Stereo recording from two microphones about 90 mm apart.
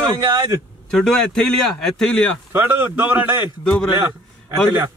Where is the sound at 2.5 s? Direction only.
20° right (ahead or behind).